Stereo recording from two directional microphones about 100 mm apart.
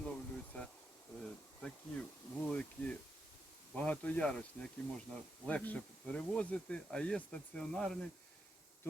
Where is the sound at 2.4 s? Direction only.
10° left (ahead or behind).